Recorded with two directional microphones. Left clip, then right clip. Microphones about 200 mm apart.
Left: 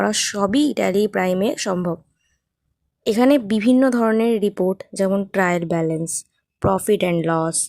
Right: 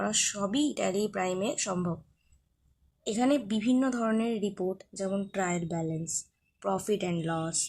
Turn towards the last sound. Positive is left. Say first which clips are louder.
# left 13 dB
turn(degrees=50)  # may be behind; listen again after turning